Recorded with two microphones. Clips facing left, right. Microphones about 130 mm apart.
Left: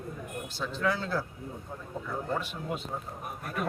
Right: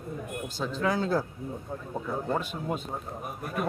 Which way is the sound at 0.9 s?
45° right (ahead or behind).